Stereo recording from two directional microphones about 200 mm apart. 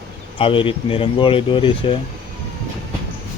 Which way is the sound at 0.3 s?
25° left (ahead or behind).